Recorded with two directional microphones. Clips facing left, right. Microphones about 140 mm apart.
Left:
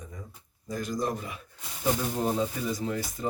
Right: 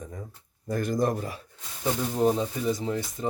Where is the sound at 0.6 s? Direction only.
60° right (ahead or behind).